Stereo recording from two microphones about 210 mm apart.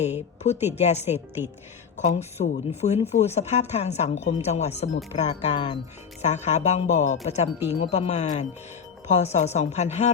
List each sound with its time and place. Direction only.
0.0 s a woman's voice: 30° left (ahead or behind)